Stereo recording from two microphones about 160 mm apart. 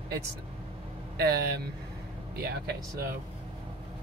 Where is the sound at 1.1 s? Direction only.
75° right (ahead or behind).